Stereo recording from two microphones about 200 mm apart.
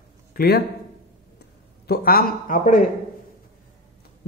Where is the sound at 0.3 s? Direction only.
50° left (ahead or behind).